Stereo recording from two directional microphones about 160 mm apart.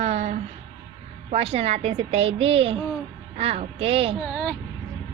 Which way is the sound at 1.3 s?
40° right (ahead or behind).